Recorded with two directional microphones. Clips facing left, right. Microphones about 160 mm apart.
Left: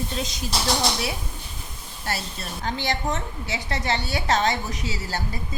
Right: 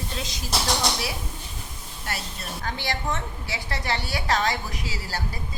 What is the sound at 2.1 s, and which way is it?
A woman's voice, 30° left (ahead or behind).